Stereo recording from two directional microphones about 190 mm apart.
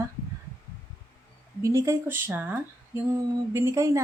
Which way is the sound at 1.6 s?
15° right (ahead or behind).